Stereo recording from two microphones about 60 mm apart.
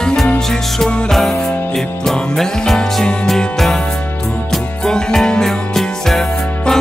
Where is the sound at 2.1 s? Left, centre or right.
Centre.